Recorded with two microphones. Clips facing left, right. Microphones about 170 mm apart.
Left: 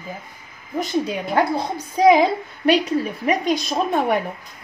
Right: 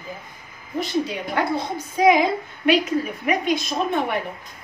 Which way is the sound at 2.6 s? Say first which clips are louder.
Left 2 dB; 35° left (ahead or behind).